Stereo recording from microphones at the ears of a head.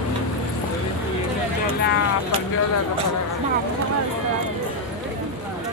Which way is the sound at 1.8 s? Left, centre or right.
Left.